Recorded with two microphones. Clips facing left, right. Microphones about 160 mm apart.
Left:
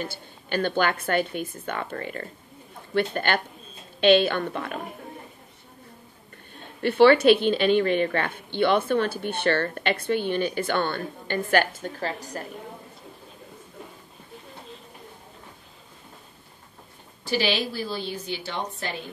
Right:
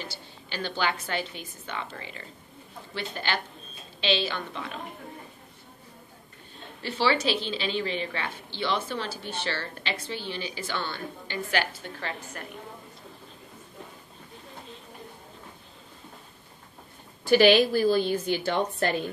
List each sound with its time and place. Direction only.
0.0 s a woman's voice: 50° left (ahead or behind)
6.5 s a woman's voice: 55° left (ahead or behind); by 12.4 s 35° left (ahead or behind)
17.2 s a woman's voice: 50° right (ahead or behind)